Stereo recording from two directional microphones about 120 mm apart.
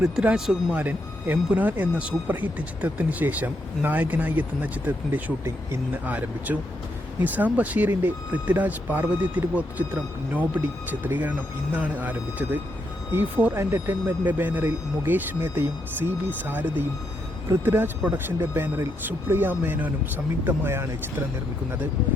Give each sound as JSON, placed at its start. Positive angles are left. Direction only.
{"t": 0.0, "sound": "speech", "side_deg": -5}